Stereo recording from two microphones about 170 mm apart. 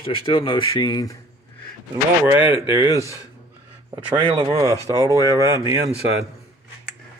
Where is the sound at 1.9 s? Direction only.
10° right (ahead or behind).